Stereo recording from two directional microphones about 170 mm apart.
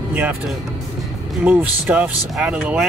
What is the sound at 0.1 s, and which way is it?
Speech, 10° right (ahead or behind).